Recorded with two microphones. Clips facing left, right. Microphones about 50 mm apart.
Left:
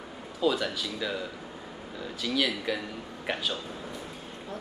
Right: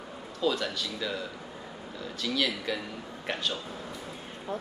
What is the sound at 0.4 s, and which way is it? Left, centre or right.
Speech, centre.